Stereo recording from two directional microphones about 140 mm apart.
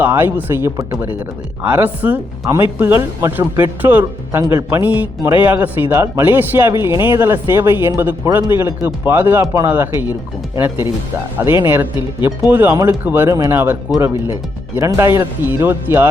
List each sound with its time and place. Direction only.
0.0 s speech: 15° right (ahead or behind)